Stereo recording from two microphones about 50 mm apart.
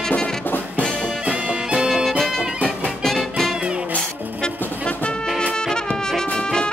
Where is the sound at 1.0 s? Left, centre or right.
Right.